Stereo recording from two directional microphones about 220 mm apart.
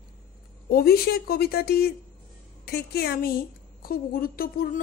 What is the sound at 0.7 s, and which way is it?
A woman's voice, 45° left (ahead or behind).